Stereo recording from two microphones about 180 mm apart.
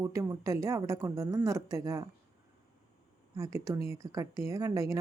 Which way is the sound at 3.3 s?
15° right (ahead or behind).